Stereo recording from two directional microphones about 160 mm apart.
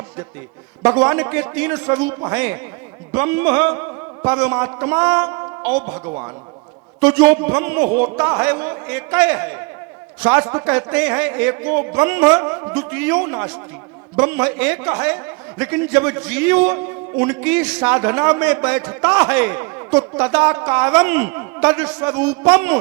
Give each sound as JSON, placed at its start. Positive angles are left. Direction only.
{"t": 0.8, "sound": "a man's voice", "side_deg": -10}
{"t": 7.0, "sound": "speech", "side_deg": -5}